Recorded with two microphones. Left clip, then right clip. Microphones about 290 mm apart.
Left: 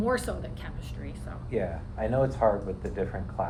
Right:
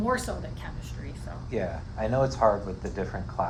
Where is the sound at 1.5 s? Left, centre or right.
Right.